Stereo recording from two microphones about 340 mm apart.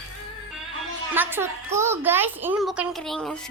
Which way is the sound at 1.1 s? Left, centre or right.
Centre.